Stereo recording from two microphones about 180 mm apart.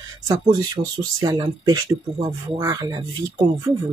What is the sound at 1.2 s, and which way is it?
Speech, 25° right (ahead or behind).